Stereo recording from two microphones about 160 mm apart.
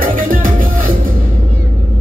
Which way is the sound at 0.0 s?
60° right (ahead or behind).